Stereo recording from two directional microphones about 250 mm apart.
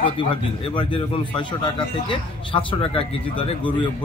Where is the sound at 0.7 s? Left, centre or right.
Centre.